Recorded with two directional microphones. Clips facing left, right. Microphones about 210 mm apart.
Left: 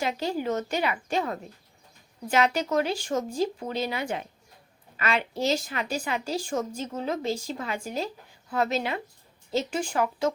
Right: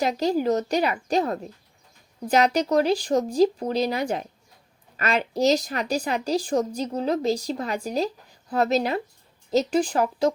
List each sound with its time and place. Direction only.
0.0 s speech: 40° right (ahead or behind)